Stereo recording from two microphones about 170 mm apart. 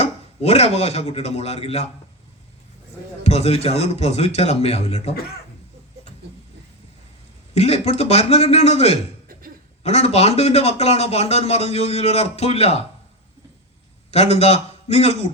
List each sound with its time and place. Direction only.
0.0 s speech: 40° left (ahead or behind)
3.2 s speech: 40° left (ahead or behind)
5.1 s speech: 65° left (ahead or behind)
7.5 s speech: 40° left (ahead or behind)
14.1 s a man's voice: 40° left (ahead or behind)